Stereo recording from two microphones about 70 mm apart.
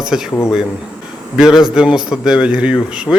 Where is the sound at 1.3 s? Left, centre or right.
Centre.